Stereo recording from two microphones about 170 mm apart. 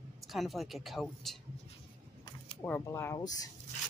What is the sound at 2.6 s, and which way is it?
Speech, 15° left (ahead or behind).